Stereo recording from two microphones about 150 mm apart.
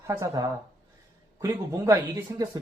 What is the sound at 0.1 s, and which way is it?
Speech, 20° right (ahead or behind).